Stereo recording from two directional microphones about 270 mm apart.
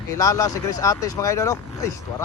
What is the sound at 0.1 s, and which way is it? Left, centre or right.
Speech, centre.